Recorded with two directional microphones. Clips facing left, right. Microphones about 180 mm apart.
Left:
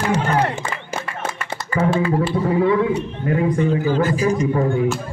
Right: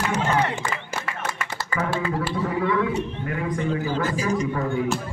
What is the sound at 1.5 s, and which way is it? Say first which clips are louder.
A man's voice: left 8 dB; 30° left (ahead or behind).